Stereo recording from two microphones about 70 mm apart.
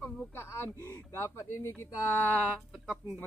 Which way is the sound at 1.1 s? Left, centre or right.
Left.